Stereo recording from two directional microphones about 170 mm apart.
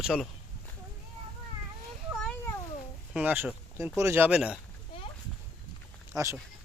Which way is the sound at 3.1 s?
10° right (ahead or behind).